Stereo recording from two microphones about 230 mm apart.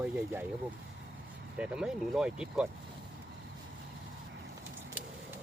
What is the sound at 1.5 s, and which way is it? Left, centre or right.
Speech, centre.